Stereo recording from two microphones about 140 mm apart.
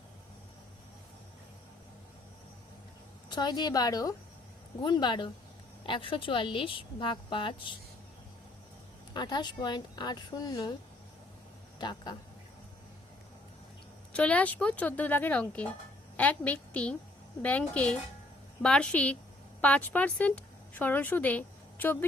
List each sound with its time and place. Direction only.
3.2 s a woman's voice: 30° left (ahead or behind)
9.1 s speech: 30° left (ahead or behind)
11.8 s a woman's voice: 30° left (ahead or behind)
14.1 s a woman's voice: 10° left (ahead or behind)